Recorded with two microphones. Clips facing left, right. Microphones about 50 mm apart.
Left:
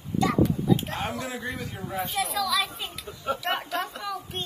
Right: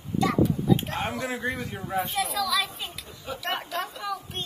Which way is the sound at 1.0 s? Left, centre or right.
Right.